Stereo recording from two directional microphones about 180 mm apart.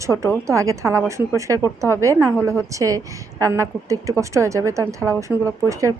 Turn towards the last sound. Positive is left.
turn(degrees=-15)  # may be behind; listen again after turning